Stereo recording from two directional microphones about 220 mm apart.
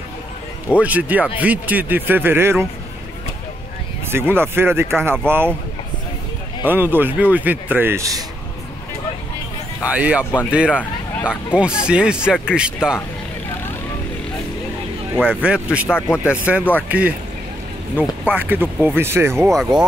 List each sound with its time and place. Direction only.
0.7 s speech: 5° right (ahead or behind)
4.1 s speech: 10° right (ahead or behind)
6.6 s speech: 10° right (ahead or behind)
9.8 s speech: 5° right (ahead or behind)
15.1 s speech: centre (ahead or behind)
17.9 s speech: 10° right (ahead or behind)